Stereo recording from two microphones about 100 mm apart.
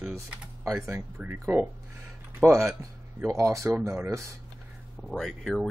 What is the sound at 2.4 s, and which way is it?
Speech, 30° right (ahead or behind).